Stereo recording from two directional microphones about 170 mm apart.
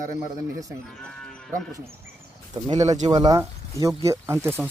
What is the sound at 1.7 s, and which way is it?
Speech, 15° right (ahead or behind).